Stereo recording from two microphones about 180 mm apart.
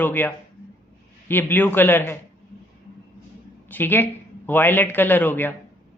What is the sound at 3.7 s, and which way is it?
Speech, 10° left (ahead or behind).